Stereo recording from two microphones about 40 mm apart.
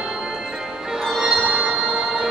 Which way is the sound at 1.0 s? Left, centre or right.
Centre.